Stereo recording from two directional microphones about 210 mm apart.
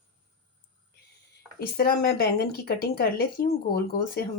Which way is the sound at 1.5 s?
50° left (ahead or behind).